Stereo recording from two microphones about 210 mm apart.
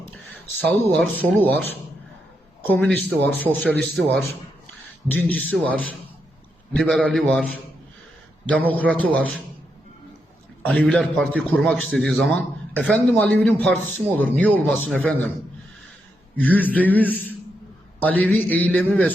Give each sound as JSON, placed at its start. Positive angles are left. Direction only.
{"t": 0.6, "sound": "a man's voice", "side_deg": 10}
{"t": 10.6, "sound": "a man's voice", "side_deg": 5}
{"t": 16.4, "sound": "speech", "side_deg": 10}